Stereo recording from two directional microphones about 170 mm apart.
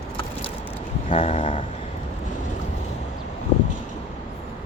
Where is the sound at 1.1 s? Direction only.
35° left (ahead or behind).